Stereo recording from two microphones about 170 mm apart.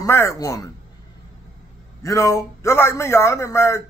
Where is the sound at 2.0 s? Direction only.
20° left (ahead or behind).